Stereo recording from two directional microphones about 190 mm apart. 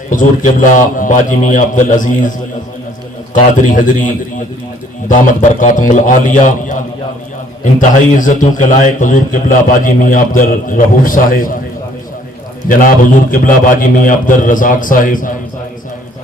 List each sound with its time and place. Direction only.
0.1 s a man's voice: 45° left (ahead or behind)
3.3 s a man's voice: 40° left (ahead or behind)
12.6 s a man's voice: 45° left (ahead or behind)